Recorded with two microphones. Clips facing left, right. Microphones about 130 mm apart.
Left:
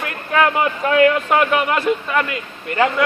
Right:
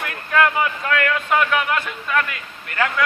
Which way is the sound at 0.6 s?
25° left (ahead or behind).